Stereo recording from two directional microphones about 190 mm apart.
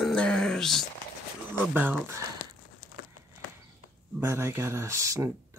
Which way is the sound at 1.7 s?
10° right (ahead or behind).